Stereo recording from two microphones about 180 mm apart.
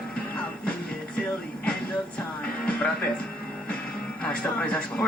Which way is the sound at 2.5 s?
5° left (ahead or behind).